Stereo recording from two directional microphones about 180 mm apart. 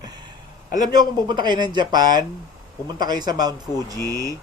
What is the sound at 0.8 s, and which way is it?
Speech, 25° right (ahead or behind).